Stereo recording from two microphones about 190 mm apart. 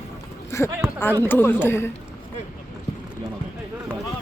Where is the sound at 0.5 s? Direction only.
15° left (ahead or behind).